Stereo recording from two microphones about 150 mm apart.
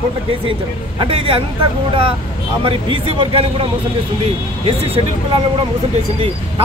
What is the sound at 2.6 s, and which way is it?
Speech, 35° right (ahead or behind).